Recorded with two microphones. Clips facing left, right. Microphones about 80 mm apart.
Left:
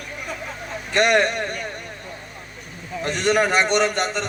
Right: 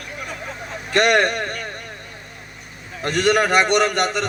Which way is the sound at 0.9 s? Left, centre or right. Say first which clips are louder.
Right 1 dB; right.